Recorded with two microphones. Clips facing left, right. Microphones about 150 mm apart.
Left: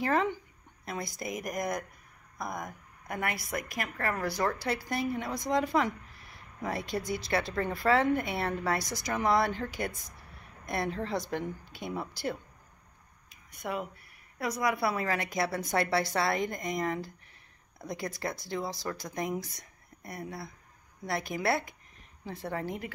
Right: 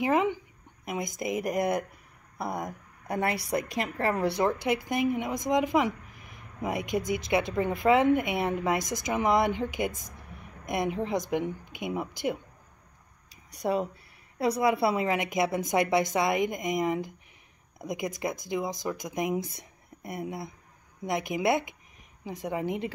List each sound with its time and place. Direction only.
0.0 s a woman's voice: 15° right (ahead or behind)
13.5 s speech: 30° right (ahead or behind); by 22.8 s 15° right (ahead or behind)